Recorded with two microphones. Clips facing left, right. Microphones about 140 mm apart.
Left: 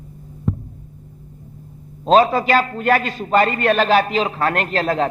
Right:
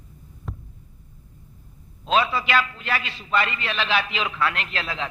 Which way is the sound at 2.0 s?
45° left (ahead or behind).